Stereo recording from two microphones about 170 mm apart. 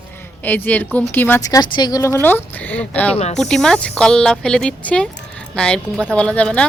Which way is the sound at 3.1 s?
40° left (ahead or behind).